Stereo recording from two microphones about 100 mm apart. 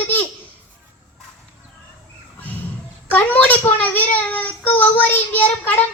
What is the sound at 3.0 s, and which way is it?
Child singing, 15° left (ahead or behind).